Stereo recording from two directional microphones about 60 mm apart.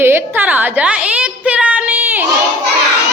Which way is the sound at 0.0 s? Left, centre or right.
Right.